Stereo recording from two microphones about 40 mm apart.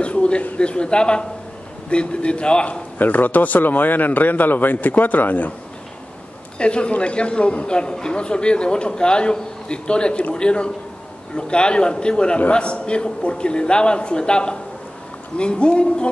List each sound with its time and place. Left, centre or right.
0.0 s a sound: left
0.6 s a man's voice: left
3.0 s a man's voice: left
6.6 s a man's voice: left